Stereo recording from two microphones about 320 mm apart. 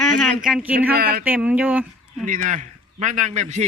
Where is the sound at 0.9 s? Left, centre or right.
Right.